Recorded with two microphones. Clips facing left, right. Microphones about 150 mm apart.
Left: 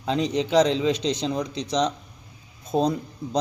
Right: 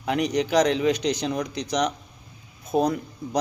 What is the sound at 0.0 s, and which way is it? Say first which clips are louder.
Speech: even; 25° left (ahead or behind).